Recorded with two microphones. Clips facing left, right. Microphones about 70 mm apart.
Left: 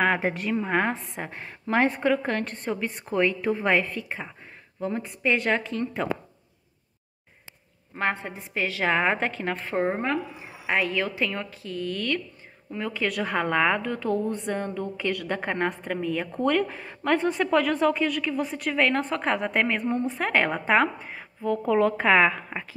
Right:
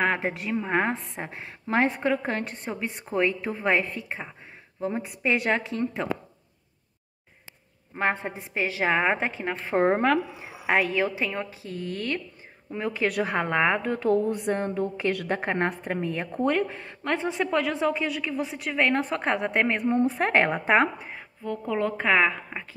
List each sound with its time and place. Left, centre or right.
0.0 s a woman's voice: centre
8.0 s a woman's voice: right
9.8 s a woman's voice: right
11.0 s a woman's voice: right
13.8 s a woman's voice: right
16.6 s a woman's voice: centre
21.0 s a woman's voice: centre